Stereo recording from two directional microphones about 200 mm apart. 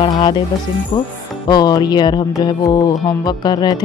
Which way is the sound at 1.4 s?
20° left (ahead or behind).